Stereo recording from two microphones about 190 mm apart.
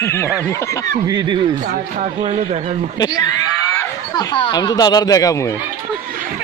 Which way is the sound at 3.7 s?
20° left (ahead or behind).